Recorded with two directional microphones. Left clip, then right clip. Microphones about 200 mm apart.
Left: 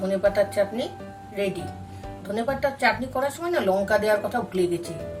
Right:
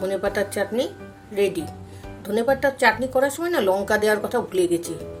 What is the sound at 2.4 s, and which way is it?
Speech, 50° right (ahead or behind).